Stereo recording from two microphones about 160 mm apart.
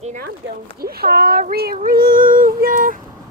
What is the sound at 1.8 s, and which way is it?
Female singing, 65° right (ahead or behind).